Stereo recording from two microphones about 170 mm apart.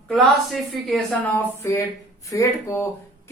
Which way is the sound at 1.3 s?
15° left (ahead or behind).